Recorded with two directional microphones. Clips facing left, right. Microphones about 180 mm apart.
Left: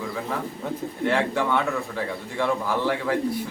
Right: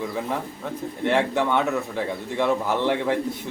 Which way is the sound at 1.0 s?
20° right (ahead or behind).